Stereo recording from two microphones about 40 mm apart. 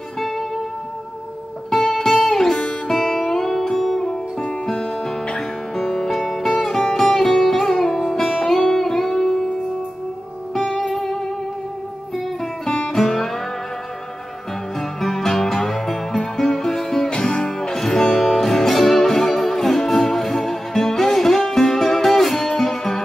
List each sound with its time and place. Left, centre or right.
0.2 s music: centre
1.9 s music: centre
4.0 s music: centre
5.8 s music: centre
11.0 s music: centre
12.6 s music: centre
14.8 s music: centre
17.1 s music: left; by 23.0 s centre